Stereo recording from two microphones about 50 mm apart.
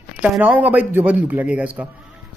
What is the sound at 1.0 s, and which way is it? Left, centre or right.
Speech, right.